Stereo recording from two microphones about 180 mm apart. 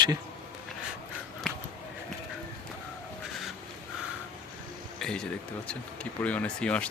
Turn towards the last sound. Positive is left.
turn(degrees=5)  # may be behind; listen again after turning